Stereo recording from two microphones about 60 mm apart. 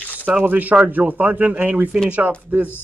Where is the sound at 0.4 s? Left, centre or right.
Right.